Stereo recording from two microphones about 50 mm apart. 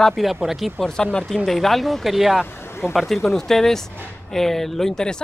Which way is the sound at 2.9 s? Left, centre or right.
Centre.